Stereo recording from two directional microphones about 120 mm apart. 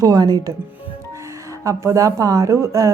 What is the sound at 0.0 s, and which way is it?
Speech, 35° right (ahead or behind).